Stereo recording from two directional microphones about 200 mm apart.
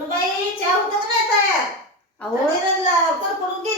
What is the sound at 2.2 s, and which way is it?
Speech, 5° left (ahead or behind).